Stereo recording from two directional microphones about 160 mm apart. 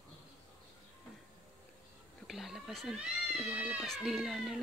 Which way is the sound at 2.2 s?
Centre (ahead or behind).